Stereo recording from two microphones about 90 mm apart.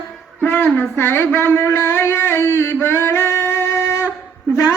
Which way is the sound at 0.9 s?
25° left (ahead or behind).